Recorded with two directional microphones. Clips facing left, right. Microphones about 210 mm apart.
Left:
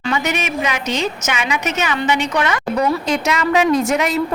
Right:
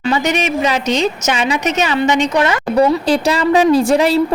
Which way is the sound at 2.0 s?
10° left (ahead or behind).